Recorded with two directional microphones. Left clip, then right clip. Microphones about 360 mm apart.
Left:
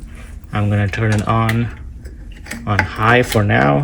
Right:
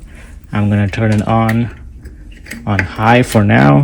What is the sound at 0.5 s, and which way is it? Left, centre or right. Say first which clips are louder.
Speech: right 3 dB; centre.